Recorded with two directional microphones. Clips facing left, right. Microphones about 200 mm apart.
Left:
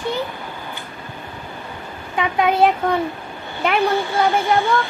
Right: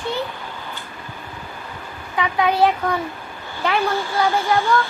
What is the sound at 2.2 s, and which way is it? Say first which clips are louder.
A child's voice: left 1 dB; 20° left (ahead or behind).